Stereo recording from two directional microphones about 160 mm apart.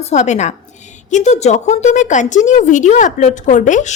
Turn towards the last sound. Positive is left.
turn(degrees=50)  # may be behind; listen again after turning